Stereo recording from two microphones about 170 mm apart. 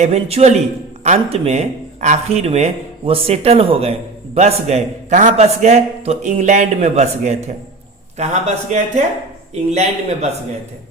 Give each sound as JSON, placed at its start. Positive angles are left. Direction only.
{"t": 0.0, "sound": "a man's voice", "side_deg": -40}